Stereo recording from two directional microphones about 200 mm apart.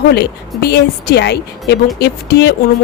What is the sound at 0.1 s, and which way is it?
A woman's voice, 55° left (ahead or behind).